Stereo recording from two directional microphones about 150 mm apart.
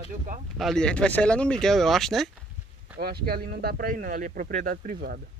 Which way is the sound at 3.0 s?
90° right.